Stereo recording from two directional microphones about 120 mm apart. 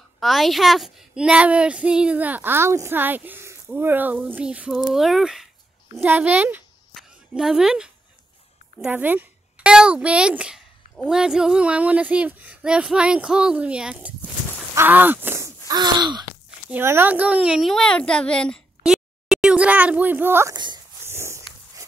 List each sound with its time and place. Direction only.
0.2 s a child's voice: centre (ahead or behind)
5.9 s a child's voice: 15° right (ahead or behind)
7.0 s a sound: 5° right (ahead or behind)
8.8 s a child's voice: 15° right (ahead or behind)
14.8 s gasp: 15° right (ahead or behind); by 16.3 s 35° right (ahead or behind)
16.7 s a woman's voice: 20° right (ahead or behind); by 18.6 s 10° left (ahead or behind)
18.8 s a sound: 5° right (ahead or behind)
20.5 s speech: 35° right (ahead or behind)
21.0 s a sound: 20° right (ahead or behind)